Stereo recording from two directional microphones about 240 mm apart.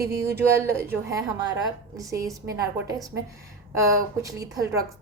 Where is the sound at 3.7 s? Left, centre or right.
Centre.